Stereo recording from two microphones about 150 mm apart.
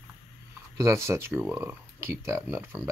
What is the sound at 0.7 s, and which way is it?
Speech, 20° right (ahead or behind).